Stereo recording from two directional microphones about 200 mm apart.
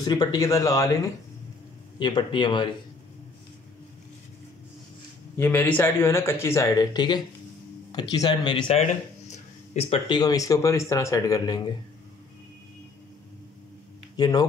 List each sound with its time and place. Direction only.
0.0 s speech: 20° left (ahead or behind)
5.4 s speech: 10° left (ahead or behind)
14.1 s speech: 20° left (ahead or behind)